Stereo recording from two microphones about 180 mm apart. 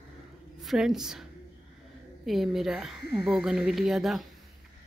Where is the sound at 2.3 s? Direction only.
Centre (ahead or behind).